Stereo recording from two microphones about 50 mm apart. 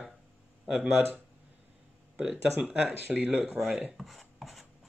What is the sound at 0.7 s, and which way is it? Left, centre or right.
Chopping, centre.